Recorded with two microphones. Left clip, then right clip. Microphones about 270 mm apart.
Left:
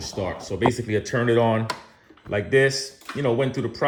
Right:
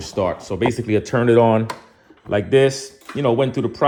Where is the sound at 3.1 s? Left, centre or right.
Centre.